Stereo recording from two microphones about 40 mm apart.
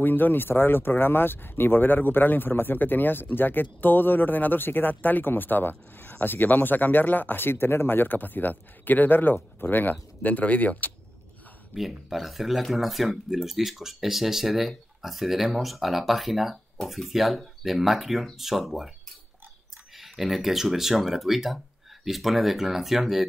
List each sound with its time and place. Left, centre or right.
0.0 s speech: left
11.7 s speech: centre
20.0 s speech: centre